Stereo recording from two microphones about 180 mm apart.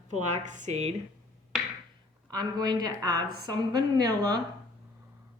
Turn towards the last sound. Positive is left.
turn(degrees=-20)  # may be behind; listen again after turning